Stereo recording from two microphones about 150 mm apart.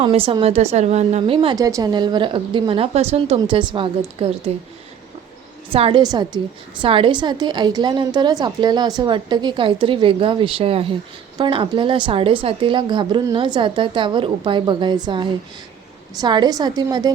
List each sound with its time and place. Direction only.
0.0 s a woman's voice: 40° right (ahead or behind)
1.5 s a woman's voice: 25° right (ahead or behind); by 4.5 s 40° right (ahead or behind)
5.7 s a woman's voice: 40° right (ahead or behind)
6.0 s a woman's voice: 30° right (ahead or behind)